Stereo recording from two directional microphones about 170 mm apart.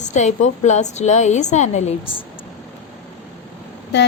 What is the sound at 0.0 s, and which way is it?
A woman's voice, 45° left (ahead or behind).